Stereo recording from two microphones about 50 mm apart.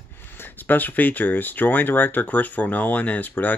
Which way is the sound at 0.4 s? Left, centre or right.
Left.